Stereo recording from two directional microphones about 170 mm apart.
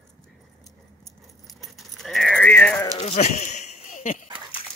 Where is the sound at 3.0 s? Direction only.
40° left (ahead or behind).